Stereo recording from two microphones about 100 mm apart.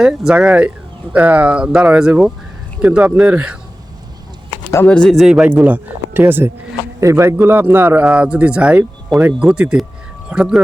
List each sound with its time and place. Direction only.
0.0 s speech: 5° right (ahead or behind)
4.9 s speech: 10° left (ahead or behind)
5.1 s speech: 5° right (ahead or behind)
5.5 s a man's voice: 15° right (ahead or behind)